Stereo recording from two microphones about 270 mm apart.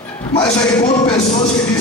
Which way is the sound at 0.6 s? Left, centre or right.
Centre.